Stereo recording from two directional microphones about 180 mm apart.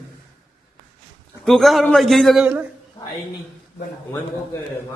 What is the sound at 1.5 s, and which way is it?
A man's voice, centre (ahead or behind).